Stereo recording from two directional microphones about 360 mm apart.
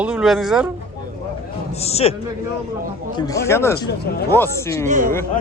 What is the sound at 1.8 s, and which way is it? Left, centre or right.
Speech, centre.